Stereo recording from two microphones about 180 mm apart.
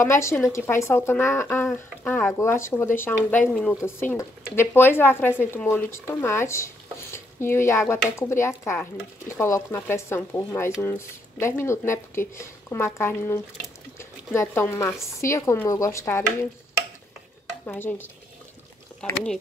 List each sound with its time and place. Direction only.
0.0 s speech: 15° left (ahead or behind)
17.6 s speech: 10° left (ahead or behind)